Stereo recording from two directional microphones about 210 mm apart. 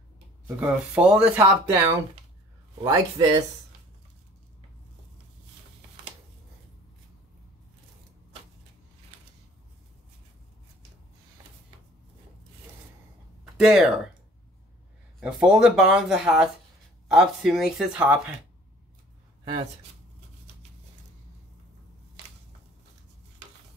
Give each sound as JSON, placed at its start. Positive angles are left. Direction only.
{"t": 0.6, "sound": "speech", "side_deg": -5}
{"t": 2.8, "sound": "speech", "side_deg": -15}
{"t": 13.6, "sound": "speech", "side_deg": 0}
{"t": 15.1, "sound": "speech", "side_deg": -5}